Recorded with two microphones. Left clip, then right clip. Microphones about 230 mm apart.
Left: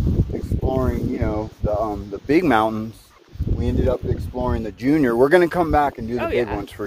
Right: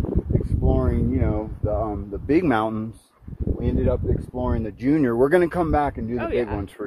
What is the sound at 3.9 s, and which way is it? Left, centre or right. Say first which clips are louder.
Speech: left 2 dB; centre.